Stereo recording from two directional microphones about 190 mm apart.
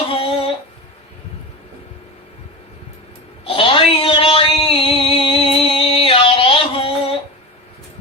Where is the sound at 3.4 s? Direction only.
30° left (ahead or behind).